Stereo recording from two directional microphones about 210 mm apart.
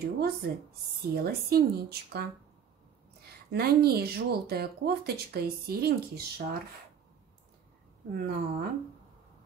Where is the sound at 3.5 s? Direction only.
50° right (ahead or behind).